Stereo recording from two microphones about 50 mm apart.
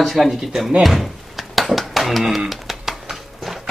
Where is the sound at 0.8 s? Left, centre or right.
Centre.